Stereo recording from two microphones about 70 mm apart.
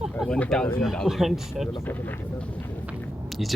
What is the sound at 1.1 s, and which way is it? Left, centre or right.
Speech, centre.